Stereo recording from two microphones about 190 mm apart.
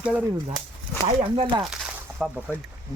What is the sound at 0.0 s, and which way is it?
Speech, 5° right (ahead or behind).